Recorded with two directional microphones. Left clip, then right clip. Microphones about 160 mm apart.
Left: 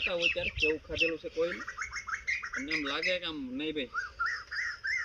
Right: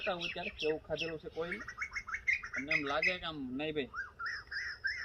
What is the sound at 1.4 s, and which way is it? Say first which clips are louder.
Bird: left 6 dB; 10° right (ahead or behind).